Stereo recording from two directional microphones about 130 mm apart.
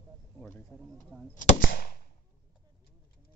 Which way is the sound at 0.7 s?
15° left (ahead or behind).